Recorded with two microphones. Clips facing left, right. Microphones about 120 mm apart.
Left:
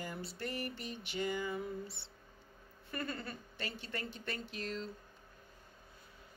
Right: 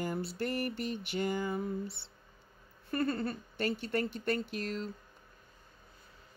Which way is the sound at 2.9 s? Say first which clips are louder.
Right 9 dB; 40° right (ahead or behind).